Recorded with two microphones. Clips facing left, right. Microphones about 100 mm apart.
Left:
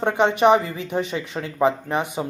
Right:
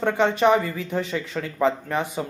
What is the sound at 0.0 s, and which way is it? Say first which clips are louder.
Speech: left 2 dB; 20° left (ahead or behind).